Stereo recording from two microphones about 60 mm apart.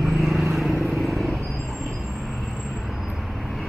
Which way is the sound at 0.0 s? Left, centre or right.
Centre.